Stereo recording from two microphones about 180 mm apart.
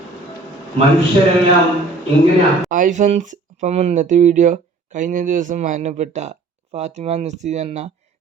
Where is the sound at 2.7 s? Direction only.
45° right (ahead or behind).